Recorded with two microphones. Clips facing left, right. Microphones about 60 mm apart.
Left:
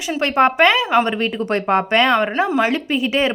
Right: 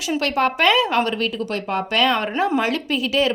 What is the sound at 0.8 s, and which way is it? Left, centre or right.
Speech, centre.